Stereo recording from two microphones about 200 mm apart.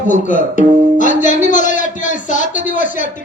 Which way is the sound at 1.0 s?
40° left (ahead or behind).